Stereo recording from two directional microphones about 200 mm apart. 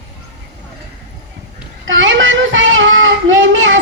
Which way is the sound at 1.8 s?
70° right (ahead or behind).